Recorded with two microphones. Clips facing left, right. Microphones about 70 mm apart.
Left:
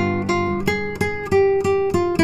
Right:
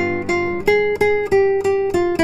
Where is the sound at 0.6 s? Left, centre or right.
Right.